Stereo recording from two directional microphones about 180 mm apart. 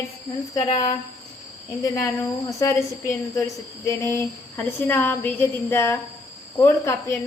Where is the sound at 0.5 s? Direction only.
20° left (ahead or behind).